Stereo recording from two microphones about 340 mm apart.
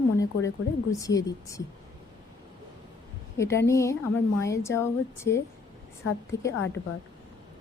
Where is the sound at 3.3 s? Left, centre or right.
Centre.